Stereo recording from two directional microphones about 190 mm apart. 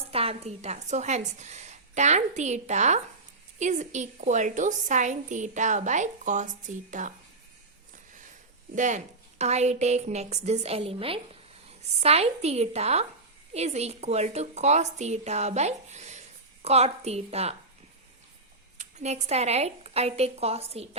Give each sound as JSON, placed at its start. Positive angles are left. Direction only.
{"t": 0.1, "sound": "a woman's voice", "side_deg": -30}
{"t": 8.7, "sound": "a woman's voice", "side_deg": -40}
{"t": 18.8, "sound": "speech", "side_deg": -35}